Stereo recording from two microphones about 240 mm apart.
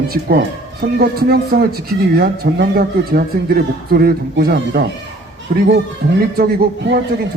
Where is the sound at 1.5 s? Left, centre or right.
Right.